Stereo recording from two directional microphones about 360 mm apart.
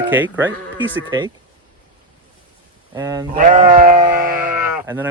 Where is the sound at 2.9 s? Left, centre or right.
Centre.